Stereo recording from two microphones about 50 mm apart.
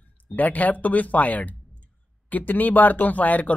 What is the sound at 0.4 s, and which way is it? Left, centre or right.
Speech, left.